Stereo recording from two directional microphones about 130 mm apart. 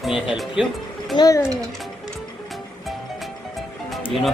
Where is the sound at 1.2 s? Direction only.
25° left (ahead or behind).